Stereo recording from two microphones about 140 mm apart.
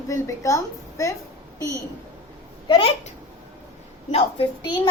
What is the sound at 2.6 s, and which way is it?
Speech, 30° left (ahead or behind).